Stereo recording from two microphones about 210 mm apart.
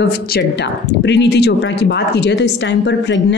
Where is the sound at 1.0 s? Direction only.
55° left (ahead or behind).